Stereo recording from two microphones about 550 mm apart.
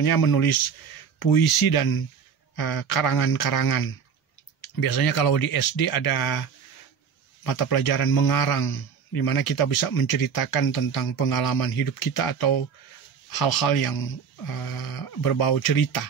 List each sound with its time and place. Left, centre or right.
0.0 s a man's voice: left
7.4 s a man's voice: left